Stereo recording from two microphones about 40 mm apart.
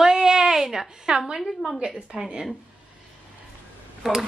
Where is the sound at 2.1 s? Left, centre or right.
Centre.